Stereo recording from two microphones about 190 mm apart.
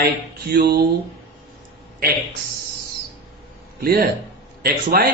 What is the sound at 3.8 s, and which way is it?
A man's voice, 50° right (ahead or behind).